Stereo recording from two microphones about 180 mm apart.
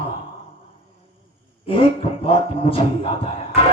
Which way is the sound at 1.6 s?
30° left (ahead or behind).